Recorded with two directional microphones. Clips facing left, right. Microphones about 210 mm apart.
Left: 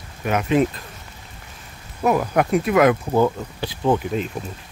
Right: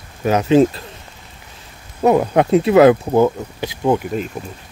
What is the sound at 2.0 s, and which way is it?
Speech, 25° right (ahead or behind).